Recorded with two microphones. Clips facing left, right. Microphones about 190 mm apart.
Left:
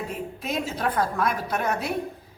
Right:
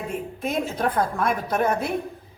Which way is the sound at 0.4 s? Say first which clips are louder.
Right 3 dB; 50° right (ahead or behind).